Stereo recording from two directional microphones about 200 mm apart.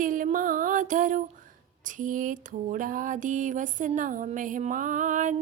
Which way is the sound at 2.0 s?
40° right (ahead or behind).